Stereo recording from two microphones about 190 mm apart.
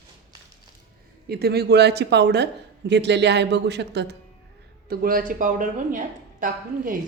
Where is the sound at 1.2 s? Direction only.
55° right (ahead or behind).